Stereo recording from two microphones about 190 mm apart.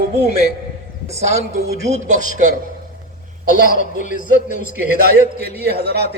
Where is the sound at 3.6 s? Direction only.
45° left (ahead or behind).